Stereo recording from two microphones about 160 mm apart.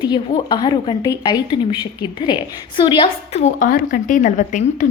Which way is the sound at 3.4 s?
55° left (ahead or behind).